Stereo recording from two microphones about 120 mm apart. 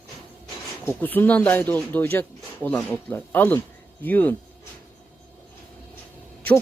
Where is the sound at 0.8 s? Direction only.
15° left (ahead or behind).